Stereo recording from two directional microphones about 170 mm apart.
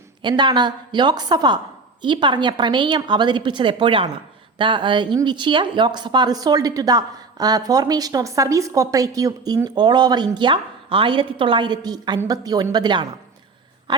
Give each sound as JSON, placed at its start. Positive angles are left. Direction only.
{"t": 0.2, "sound": "speech", "side_deg": -25}